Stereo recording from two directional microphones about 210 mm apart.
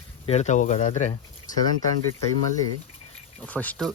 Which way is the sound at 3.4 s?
5° left (ahead or behind).